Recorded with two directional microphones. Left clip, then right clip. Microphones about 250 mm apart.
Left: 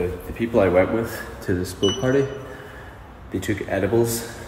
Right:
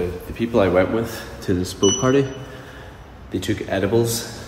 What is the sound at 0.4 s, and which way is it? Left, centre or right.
Speech, centre.